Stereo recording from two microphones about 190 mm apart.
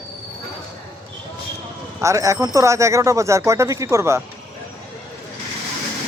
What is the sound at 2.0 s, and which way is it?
Speech, 15° right (ahead or behind).